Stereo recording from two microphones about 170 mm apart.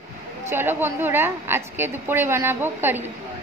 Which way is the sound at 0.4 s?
15° right (ahead or behind).